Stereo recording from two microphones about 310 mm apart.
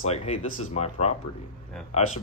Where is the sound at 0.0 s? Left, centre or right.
Centre.